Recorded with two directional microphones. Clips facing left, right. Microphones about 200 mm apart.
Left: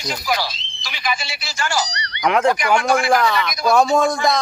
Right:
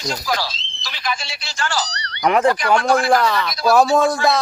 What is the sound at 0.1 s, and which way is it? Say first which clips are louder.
Speech: left 1 dB; 10° left (ahead or behind).